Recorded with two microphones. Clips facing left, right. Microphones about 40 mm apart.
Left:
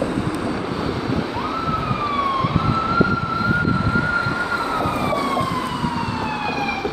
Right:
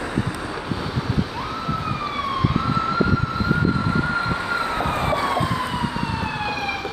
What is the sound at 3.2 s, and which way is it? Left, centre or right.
Emergency vehicle, centre.